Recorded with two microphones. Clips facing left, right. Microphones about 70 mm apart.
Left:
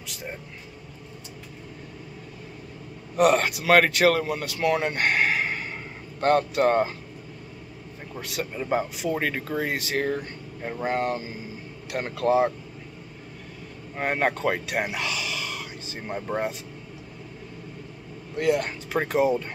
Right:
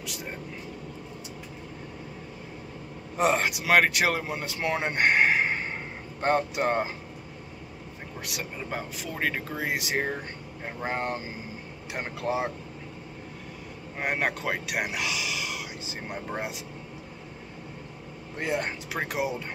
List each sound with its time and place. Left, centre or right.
3.2 s speech: centre
8.2 s speech: centre
8.5 s speech: centre
12.3 s speech: centre
13.9 s speech: centre
18.4 s speech: right
18.9 s speech: centre